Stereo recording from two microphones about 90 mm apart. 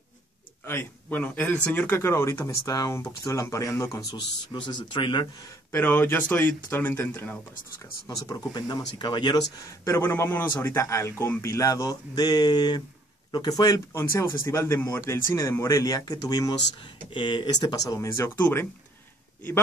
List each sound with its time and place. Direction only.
0.7 s speech: 25° left (ahead or behind); by 5.3 s 60° left (ahead or behind)
5.7 s speech: 20° left (ahead or behind)
7.8 s speech: 45° left (ahead or behind)
9.8 s speech: 30° left (ahead or behind); by 13.7 s 45° left (ahead or behind)
13.9 s speech: 30° left (ahead or behind); by 16.5 s 45° left (ahead or behind)
16.7 s speech: 65° left (ahead or behind); by 18.3 s 35° left (ahead or behind)
18.4 s speech: 25° left (ahead or behind)